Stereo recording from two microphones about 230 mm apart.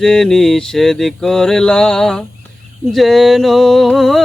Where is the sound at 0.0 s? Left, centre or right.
Centre.